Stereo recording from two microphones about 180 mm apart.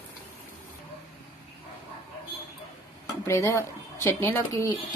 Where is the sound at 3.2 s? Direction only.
15° left (ahead or behind).